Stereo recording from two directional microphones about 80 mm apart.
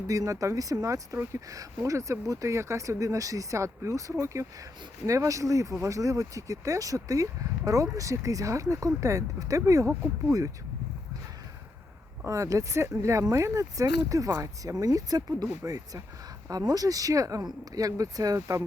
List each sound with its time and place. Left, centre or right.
0.1 s speech: right
12.2 s speech: right